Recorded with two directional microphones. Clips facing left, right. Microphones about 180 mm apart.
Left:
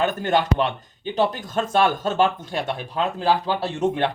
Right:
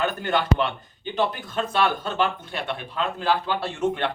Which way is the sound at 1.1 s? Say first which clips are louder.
Left 3 dB; 45° left (ahead or behind).